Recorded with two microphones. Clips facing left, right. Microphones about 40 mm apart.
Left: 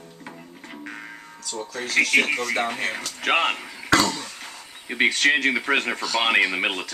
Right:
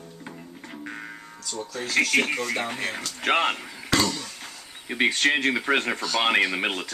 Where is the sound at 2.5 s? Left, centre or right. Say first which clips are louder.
Left 3 dB; centre.